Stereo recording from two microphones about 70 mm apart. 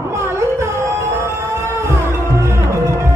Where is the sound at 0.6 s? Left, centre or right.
Right.